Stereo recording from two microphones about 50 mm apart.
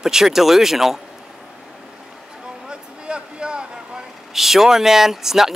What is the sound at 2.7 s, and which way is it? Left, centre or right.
Vehicle, centre.